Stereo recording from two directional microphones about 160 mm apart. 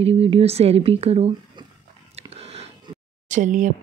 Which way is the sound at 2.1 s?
40° right (ahead or behind).